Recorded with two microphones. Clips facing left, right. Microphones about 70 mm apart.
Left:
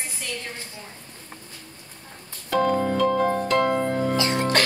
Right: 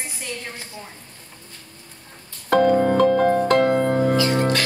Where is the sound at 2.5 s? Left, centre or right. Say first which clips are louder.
Right 5 dB; right.